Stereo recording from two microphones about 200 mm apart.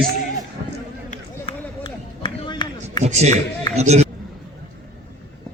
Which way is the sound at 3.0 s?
35° right (ahead or behind).